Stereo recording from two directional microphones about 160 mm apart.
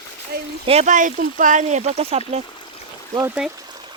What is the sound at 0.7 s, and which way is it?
Speech, 45° right (ahead or behind).